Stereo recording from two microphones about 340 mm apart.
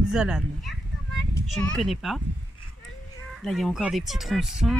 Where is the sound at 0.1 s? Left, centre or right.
Centre.